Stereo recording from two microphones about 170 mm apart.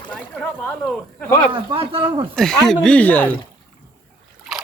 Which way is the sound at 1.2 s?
15° left (ahead or behind).